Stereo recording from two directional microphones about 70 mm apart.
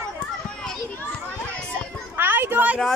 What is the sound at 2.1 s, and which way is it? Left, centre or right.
Children playing, right.